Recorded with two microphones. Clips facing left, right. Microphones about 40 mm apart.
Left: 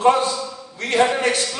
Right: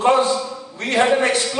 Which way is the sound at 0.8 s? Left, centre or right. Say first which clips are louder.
Right 1 dB; right.